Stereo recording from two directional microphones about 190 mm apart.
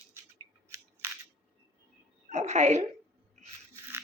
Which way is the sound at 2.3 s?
35° right (ahead or behind).